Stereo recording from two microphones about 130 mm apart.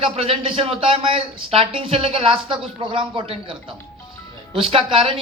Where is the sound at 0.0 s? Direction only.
45° right (ahead or behind).